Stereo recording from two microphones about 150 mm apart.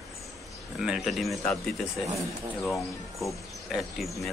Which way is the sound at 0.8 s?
5° right (ahead or behind).